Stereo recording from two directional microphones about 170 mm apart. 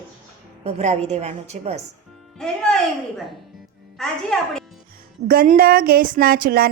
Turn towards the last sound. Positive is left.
turn(degrees=-60)  # may be behind; listen again after turning